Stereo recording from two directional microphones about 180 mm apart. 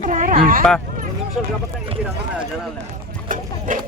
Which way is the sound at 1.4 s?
Centre (ahead or behind).